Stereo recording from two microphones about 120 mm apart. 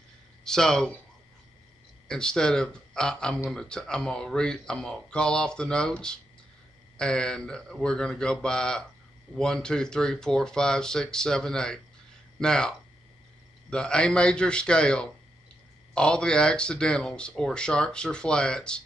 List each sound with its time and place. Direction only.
0.4 s speech: 5° left (ahead or behind)
2.0 s speech: 5° left (ahead or behind)